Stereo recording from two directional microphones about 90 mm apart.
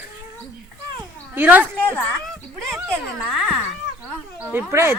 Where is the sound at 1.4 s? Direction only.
20° right (ahead or behind).